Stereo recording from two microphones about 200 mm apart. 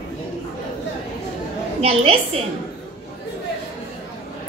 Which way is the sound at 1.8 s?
30° right (ahead or behind).